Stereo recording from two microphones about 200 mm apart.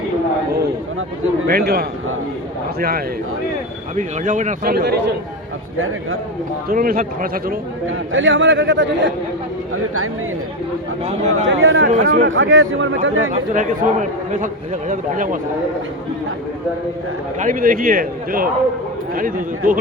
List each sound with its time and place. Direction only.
1.5 s speech: 50° right (ahead or behind)
3.9 s a man's voice: 40° right (ahead or behind)
4.6 s speech: 55° right (ahead or behind)
6.7 s speech: 45° right (ahead or behind)
8.1 s a man's voice: 75° right (ahead or behind)
11.0 s a man's voice: 35° right (ahead or behind)
11.4 s a man's voice: 75° right (ahead or behind)
11.9 s speech: 45° right (ahead or behind)
12.3 s a man's voice: 80° right
13.3 s a man's voice: 40° right (ahead or behind)
17.4 s speech: 45° right (ahead or behind)